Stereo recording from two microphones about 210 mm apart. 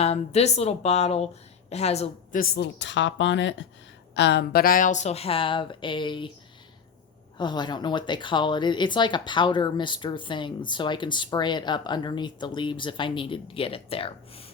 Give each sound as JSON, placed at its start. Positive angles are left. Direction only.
{"t": 0.0, "sound": "speech", "side_deg": 30}
{"t": 2.4, "sound": "speech", "side_deg": 55}
{"t": 7.3, "sound": "speech", "side_deg": 20}